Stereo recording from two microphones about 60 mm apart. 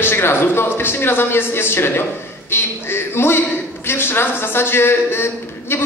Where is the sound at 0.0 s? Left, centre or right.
Left.